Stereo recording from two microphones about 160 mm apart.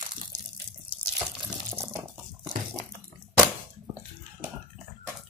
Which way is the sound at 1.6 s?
20° right (ahead or behind).